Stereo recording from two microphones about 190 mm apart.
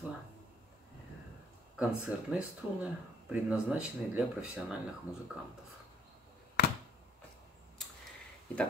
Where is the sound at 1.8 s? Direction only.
5° right (ahead or behind).